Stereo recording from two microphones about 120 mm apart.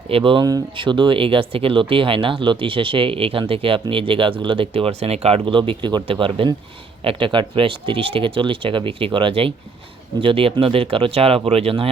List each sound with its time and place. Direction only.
0.1 s speech: 45° right (ahead or behind)